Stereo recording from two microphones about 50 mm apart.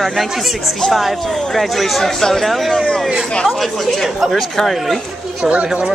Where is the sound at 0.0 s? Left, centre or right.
Centre.